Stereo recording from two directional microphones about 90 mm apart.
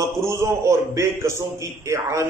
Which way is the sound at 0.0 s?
35° right (ahead or behind).